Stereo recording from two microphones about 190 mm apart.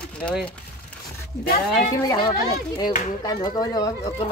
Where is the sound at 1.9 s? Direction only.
20° left (ahead or behind).